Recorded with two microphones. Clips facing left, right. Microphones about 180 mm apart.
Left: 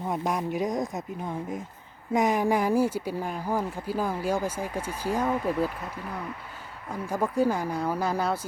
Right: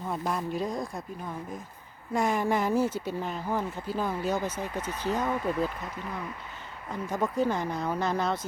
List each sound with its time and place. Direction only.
0.0 s speech: 15° left (ahead or behind)
6.9 s speech: 10° left (ahead or behind)